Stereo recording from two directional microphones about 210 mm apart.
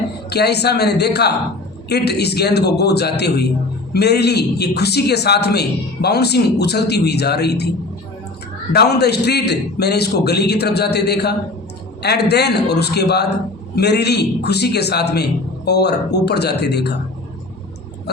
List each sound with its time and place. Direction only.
0.3 s a man's voice: 50° left (ahead or behind)
8.7 s a man's voice: 50° left (ahead or behind)